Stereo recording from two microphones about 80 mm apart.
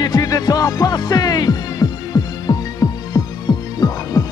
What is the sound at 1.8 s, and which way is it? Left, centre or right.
Throbbing, left.